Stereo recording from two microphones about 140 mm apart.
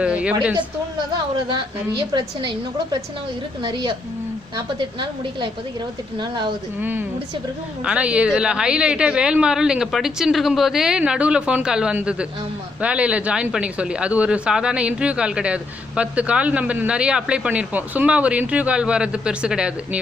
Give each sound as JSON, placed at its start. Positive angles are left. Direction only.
{"t": 0.0, "sound": "a sound", "side_deg": -10}
{"t": 2.1, "sound": "a woman's voice", "side_deg": -30}
{"t": 7.9, "sound": "speech", "side_deg": -10}